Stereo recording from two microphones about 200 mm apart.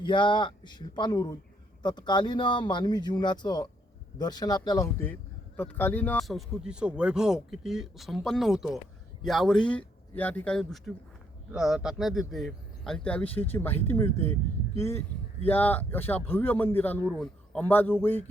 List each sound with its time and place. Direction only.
0.0 s a man's voice: 25° left (ahead or behind)